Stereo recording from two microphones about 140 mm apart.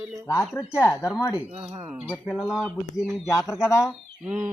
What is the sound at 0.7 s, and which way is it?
Speech, 20° left (ahead or behind).